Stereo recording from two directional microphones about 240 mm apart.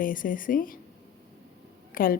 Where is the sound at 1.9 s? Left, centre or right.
Left.